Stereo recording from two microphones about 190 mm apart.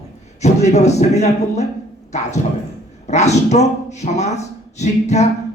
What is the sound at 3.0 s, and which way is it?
Speech, 35° left (ahead or behind).